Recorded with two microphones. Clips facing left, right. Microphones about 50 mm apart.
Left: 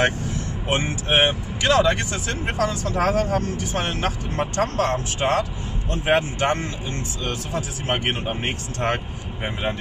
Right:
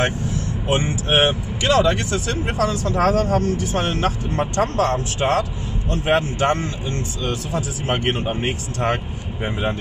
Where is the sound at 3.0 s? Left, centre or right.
Centre.